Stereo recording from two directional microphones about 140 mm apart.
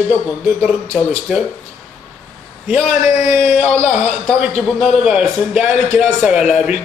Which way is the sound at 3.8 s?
50° left (ahead or behind).